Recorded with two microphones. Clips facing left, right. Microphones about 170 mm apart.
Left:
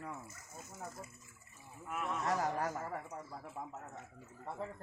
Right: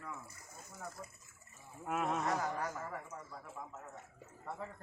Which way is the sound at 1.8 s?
55° right (ahead or behind).